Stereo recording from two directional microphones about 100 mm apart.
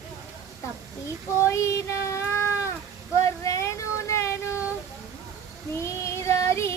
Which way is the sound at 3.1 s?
30° left (ahead or behind).